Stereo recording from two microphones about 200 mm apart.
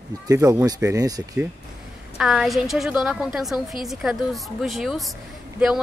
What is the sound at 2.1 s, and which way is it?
A woman's voice, centre (ahead or behind).